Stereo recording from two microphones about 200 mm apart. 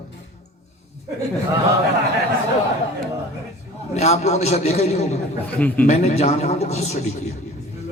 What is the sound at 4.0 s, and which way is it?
Speech, 35° left (ahead or behind).